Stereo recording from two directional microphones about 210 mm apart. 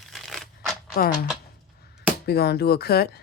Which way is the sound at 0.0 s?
Centre (ahead or behind).